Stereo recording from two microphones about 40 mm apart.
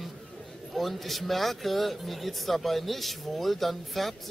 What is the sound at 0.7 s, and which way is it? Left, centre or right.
Speech, centre.